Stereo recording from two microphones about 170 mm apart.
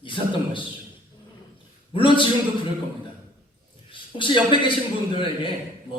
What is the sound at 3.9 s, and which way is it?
Speech, 30° left (ahead or behind).